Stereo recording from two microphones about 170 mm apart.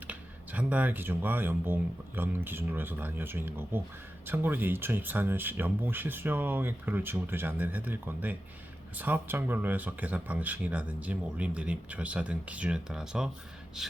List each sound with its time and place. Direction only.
0.1 s speech: 10° right (ahead or behind)
13.8 s gasp: 5° right (ahead or behind)